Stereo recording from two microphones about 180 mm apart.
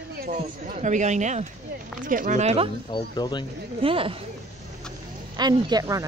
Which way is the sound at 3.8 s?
30° right (ahead or behind).